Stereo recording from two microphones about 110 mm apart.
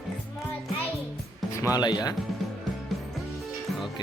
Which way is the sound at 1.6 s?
35° left (ahead or behind).